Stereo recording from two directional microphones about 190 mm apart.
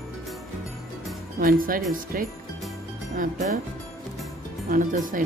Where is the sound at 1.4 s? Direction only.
50° right (ahead or behind).